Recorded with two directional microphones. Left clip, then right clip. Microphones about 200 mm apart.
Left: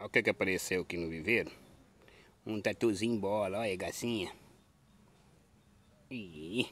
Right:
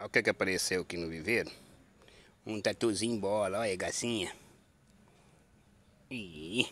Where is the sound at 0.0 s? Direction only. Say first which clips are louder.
Right 1 dB; 15° left (ahead or behind).